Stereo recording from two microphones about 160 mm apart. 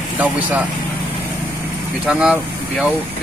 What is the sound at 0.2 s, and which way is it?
Speech, 10° right (ahead or behind).